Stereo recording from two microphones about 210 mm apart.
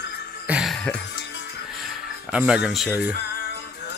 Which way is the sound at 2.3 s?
5° right (ahead or behind).